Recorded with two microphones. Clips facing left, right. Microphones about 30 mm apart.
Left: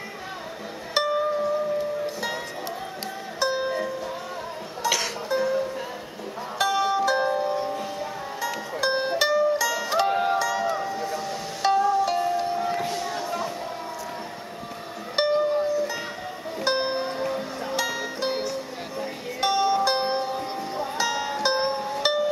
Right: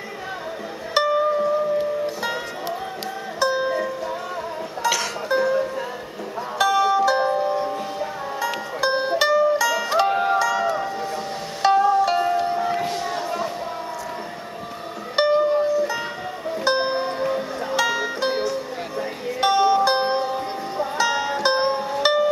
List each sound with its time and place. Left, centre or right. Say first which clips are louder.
0.9 s music: right 4 dB; centre
3.3 s music: right 4 dB; centre
5.3 s music: right 4 dB; right
6.6 s music: right 5 dB; centre
8.8 s music: right 3 dB; centre
11.7 s music: right 4 dB; right
12.4 s music: right 3 dB; right
12.8 s a sound: right 3 dB; right
15.4 s music: right 4 dB; right
16.6 s music: right 3 dB; centre